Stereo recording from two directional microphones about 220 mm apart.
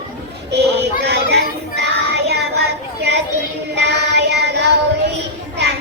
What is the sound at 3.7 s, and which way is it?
Music, 50° right (ahead or behind).